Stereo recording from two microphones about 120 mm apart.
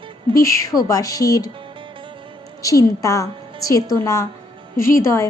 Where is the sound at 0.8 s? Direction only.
30° left (ahead or behind).